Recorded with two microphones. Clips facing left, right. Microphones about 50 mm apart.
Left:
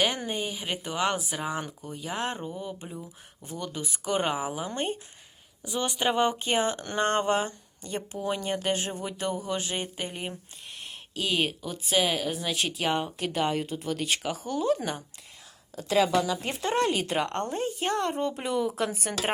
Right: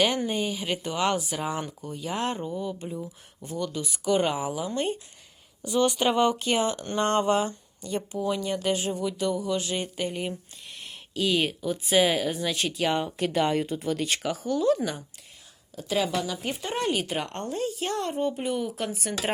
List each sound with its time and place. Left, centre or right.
0.3 s speech: centre
2.6 s speech: centre
4.5 s speech: left
5.6 s speech: centre
6.1 s speech: left
10.7 s speech: centre
14.4 s speech: centre
15.7 s a woman's voice: left
18.2 s speech: left
18.9 s a woman's voice: left